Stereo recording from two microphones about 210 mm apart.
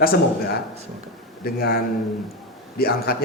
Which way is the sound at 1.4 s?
45° left (ahead or behind).